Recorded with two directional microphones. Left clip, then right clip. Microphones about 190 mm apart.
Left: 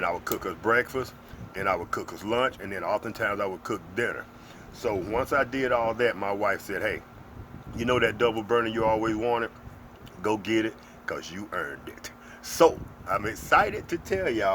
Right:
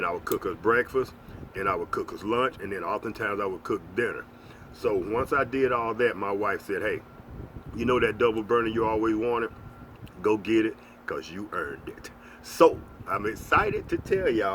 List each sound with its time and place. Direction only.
0.0 s speech: 25° left (ahead or behind)